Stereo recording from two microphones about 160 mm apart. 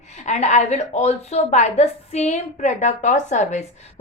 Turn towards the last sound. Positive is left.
turn(degrees=45)  # may be behind; listen again after turning